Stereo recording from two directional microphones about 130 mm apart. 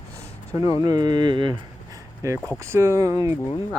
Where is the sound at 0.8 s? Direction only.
30° right (ahead or behind).